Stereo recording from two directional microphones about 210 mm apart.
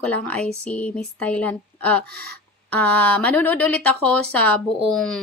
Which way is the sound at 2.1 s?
50° right (ahead or behind).